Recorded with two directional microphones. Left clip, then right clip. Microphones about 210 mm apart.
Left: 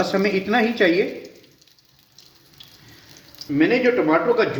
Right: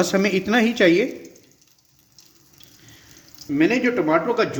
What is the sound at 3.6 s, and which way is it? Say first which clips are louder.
Speech: left 2 dB; 55° right (ahead or behind).